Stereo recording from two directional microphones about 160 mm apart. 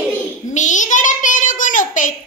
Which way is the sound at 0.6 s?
50° left (ahead or behind).